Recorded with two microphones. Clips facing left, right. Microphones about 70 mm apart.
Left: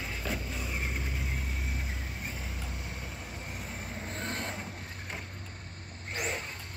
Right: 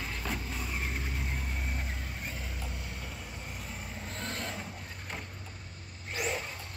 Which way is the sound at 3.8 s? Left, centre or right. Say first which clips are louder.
Left 3 dB; left.